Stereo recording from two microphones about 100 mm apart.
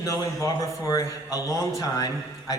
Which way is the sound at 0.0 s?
30° left (ahead or behind).